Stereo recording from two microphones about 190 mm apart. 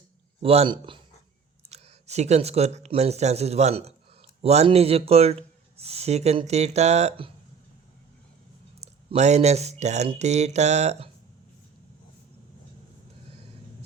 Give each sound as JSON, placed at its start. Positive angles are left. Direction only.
{"t": 0.4, "sound": "speech", "side_deg": -30}
{"t": 1.7, "sound": "speech", "side_deg": -35}
{"t": 8.8, "sound": "speech", "side_deg": -35}